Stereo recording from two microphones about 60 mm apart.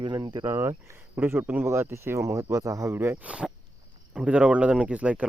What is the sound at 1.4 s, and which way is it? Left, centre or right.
Speech, right.